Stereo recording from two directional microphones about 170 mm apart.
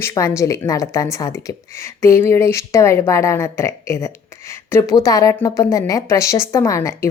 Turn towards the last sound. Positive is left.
turn(degrees=15)  # may be behind; listen again after turning